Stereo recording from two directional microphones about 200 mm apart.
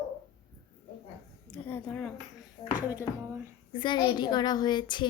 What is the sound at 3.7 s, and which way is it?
A woman's voice, 25° left (ahead or behind).